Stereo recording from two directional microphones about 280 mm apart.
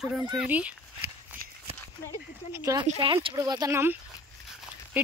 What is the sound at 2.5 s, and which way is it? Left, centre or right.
Speech, centre.